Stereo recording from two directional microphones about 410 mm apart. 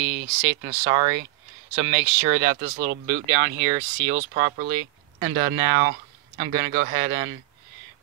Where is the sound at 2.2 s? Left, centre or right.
Centre.